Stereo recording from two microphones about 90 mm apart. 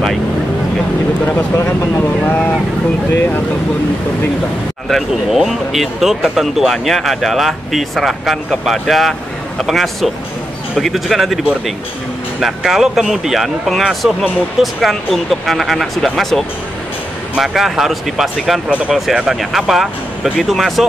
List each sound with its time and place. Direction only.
1.2 s speech: 25° left (ahead or behind)
4.8 s speech: centre (ahead or behind)
12.4 s speech: 5° right (ahead or behind)